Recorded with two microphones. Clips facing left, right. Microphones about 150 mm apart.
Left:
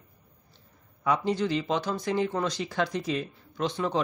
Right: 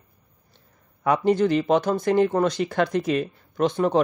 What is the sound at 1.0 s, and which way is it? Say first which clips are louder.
Speech: right 7 dB; 55° right (ahead or behind).